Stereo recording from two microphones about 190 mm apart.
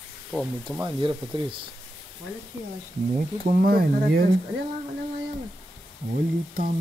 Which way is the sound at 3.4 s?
50° right (ahead or behind).